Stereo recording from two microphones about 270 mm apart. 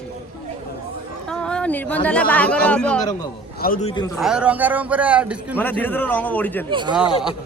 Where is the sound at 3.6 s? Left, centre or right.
Left.